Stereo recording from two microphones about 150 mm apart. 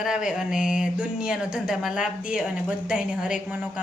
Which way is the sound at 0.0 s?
5° right (ahead or behind).